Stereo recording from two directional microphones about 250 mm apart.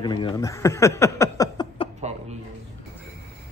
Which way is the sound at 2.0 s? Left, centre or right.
Right.